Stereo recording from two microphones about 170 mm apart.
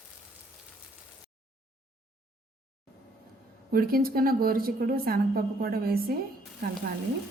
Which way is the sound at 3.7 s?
60° right (ahead or behind).